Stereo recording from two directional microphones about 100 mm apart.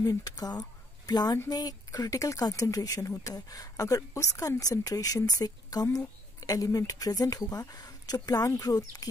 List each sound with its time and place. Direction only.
0.0 s speech: 40° left (ahead or behind)